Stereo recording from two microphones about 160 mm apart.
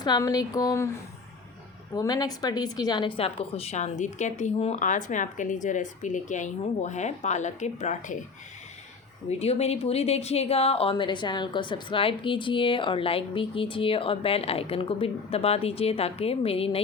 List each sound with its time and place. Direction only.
0.0 s speech: 25° left (ahead or behind)
2.0 s a woman's voice: 25° left (ahead or behind); by 8.2 s 50° left (ahead or behind)
9.4 s speech: 40° left (ahead or behind)